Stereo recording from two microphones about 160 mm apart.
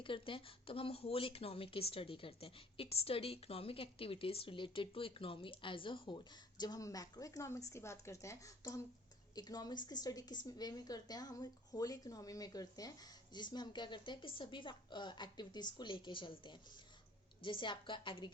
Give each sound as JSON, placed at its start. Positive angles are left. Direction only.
{"t": 0.0, "sound": "a woman's voice", "side_deg": 30}